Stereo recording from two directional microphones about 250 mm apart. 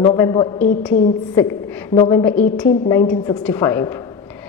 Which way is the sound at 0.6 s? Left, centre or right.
Left.